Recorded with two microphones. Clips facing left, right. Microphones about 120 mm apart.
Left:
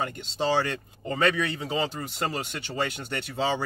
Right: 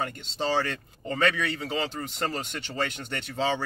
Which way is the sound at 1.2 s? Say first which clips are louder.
Left 1 dB; 15° left (ahead or behind).